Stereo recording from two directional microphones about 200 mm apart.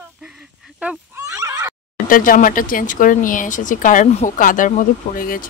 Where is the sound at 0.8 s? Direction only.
10° right (ahead or behind).